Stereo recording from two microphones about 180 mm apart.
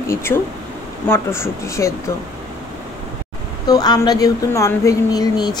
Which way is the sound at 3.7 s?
20° left (ahead or behind).